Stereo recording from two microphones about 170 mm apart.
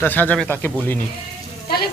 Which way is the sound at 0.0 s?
10° left (ahead or behind).